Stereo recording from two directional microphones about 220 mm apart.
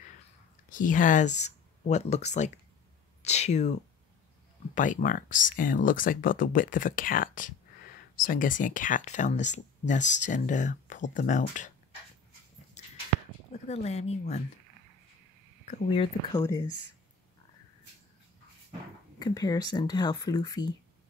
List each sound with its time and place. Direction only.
0.7 s speech: 35° left (ahead or behind)
4.7 s speech: 35° left (ahead or behind)
12.8 s a sound: 30° left (ahead or behind)
13.5 s speech: 30° left (ahead or behind)
15.6 s speech: 30° left (ahead or behind)
16.3 s speech: 15° left (ahead or behind)
19.1 s speech: 20° left (ahead or behind)